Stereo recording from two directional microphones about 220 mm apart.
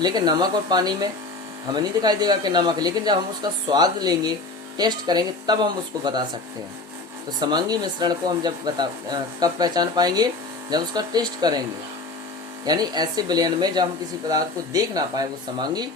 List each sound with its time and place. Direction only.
0.0 s speech: 20° right (ahead or behind)
7.3 s speech: 20° right (ahead or behind)
12.6 s speech: 20° right (ahead or behind)